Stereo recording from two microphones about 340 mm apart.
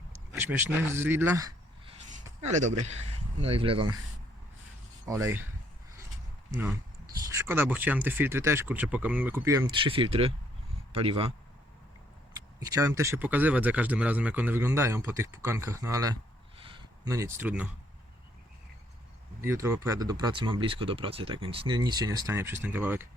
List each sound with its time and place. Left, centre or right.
0.3 s speech: centre
2.5 s speech: right
5.1 s speech: centre
6.5 s speech: centre
12.3 s speech: centre
16.6 s a sound: centre
19.4 s speech: centre